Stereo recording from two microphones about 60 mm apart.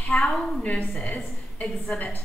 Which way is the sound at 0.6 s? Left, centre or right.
Left.